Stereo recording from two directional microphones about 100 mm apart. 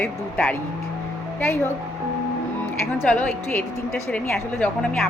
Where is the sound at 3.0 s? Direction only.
15° left (ahead or behind).